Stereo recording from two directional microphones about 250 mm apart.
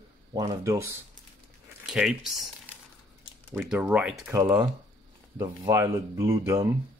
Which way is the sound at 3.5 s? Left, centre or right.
Centre.